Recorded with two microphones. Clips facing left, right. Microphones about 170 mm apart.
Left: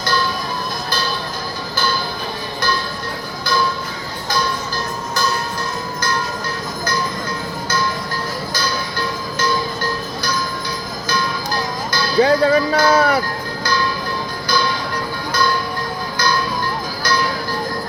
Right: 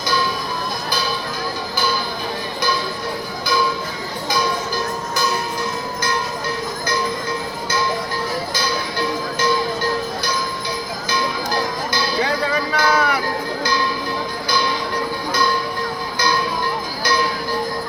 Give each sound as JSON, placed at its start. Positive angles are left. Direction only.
{"t": 8.6, "sound": "music", "side_deg": -25}
{"t": 12.2, "sound": "music", "side_deg": 35}